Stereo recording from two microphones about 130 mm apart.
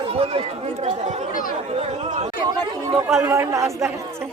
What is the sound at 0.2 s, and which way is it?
Speech, 55° right (ahead or behind).